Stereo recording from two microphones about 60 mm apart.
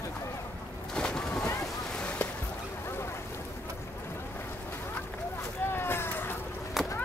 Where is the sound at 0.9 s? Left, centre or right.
Centre.